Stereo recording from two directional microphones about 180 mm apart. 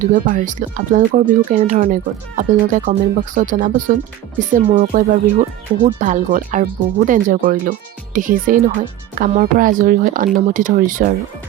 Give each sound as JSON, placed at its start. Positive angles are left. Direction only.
{"t": 0.0, "sound": "speech", "side_deg": -45}